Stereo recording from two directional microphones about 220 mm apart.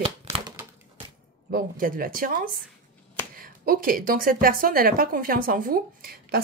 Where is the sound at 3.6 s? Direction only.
40° right (ahead or behind).